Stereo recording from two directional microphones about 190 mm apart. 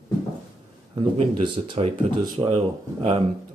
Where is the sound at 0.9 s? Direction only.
25° right (ahead or behind).